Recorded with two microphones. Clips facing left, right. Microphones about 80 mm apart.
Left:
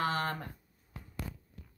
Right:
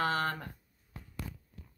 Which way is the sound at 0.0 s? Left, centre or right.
Centre.